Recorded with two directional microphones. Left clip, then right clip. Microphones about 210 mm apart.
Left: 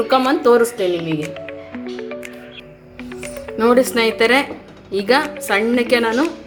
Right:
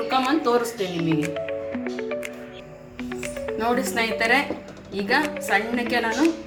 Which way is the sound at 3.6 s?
55° left (ahead or behind).